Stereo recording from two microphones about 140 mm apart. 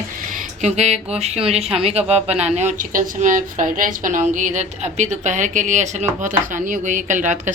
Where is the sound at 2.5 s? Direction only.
65° right (ahead or behind).